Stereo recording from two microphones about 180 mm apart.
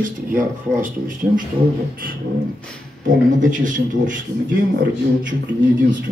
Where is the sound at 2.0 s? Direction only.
55° right (ahead or behind).